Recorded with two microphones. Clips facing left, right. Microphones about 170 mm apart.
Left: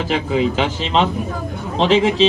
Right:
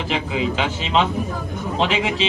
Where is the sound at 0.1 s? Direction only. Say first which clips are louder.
Left 5 dB; 40° left (ahead or behind).